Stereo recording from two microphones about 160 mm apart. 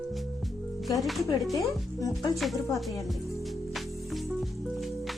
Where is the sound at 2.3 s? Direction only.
Centre (ahead or behind).